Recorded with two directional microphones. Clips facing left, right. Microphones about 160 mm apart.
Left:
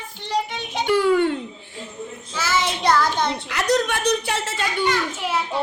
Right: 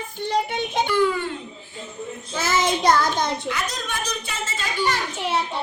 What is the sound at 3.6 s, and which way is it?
A woman's voice, 70° left (ahead or behind).